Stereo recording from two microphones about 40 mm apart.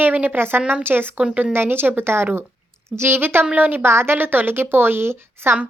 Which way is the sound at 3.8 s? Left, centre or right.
Right.